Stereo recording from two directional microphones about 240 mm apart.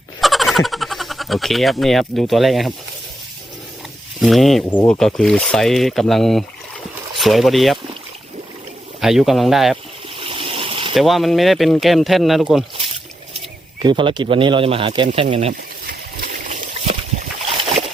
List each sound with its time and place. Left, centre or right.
0.2 s speech: centre
4.2 s speech: centre
9.0 s speech: centre
10.2 s a sound: right
10.9 s speech: centre
13.8 s speech: centre
16.5 s a sound: right